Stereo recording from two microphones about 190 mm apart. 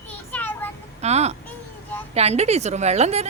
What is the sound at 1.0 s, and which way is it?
Speech, 35° right (ahead or behind).